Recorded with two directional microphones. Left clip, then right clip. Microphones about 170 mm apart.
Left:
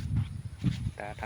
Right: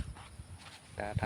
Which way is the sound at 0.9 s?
5° left (ahead or behind).